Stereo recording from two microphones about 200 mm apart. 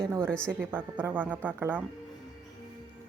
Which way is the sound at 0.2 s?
5° left (ahead or behind).